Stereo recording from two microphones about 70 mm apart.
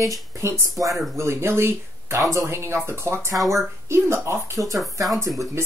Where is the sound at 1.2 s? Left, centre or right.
Right.